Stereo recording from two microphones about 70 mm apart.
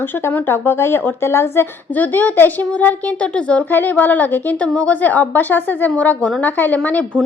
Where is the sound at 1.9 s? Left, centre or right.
Left.